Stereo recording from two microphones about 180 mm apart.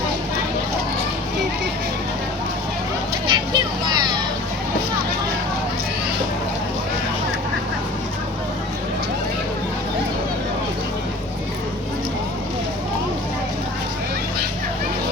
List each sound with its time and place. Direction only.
3.2 s vehicle: 25° right (ahead or behind)